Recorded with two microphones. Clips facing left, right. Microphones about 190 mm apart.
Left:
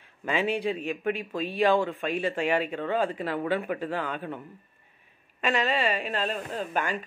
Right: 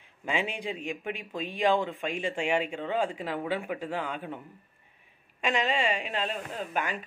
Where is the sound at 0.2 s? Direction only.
15° right (ahead or behind).